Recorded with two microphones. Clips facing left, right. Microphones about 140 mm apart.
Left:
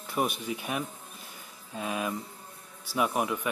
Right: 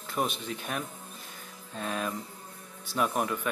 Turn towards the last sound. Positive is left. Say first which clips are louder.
# left 1 dB
turn(degrees=10)  # may be behind; listen again after turning